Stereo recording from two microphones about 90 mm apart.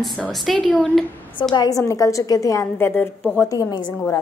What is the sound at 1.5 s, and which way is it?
A woman's voice, 45° left (ahead or behind).